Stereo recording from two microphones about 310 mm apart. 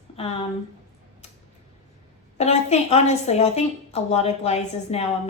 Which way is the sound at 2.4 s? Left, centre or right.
Left.